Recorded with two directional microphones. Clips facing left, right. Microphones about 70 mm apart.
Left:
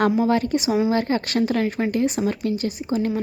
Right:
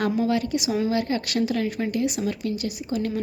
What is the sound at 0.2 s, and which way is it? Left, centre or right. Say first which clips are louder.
A woman's voice: left 3 dB; left.